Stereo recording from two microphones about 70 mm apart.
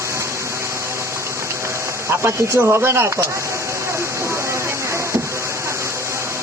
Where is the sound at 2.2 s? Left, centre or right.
Right.